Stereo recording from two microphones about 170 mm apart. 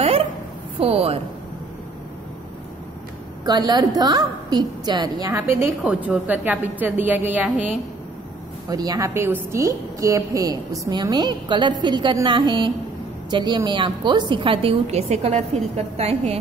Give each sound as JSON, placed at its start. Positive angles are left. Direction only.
{"t": 0.9, "sound": "a woman's voice", "side_deg": -35}
{"t": 3.4, "sound": "a woman's voice", "side_deg": -25}
{"t": 8.6, "sound": "a woman's voice", "side_deg": -20}